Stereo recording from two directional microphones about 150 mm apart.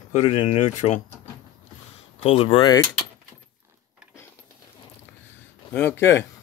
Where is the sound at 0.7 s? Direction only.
55° left (ahead or behind).